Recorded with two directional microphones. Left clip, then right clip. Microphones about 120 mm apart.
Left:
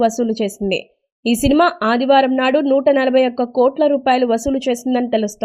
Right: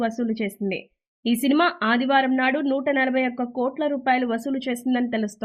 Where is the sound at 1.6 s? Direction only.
35° left (ahead or behind).